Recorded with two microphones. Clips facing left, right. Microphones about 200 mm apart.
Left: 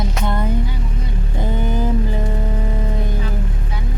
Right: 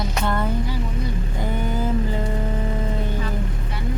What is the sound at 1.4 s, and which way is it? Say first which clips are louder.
Vehicle: left 4 dB; 20° left (ahead or behind).